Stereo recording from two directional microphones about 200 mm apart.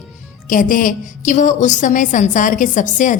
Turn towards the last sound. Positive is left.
turn(degrees=40)  # may be behind; listen again after turning